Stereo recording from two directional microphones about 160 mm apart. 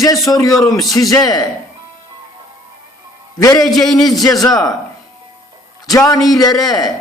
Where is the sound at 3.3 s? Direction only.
20° left (ahead or behind).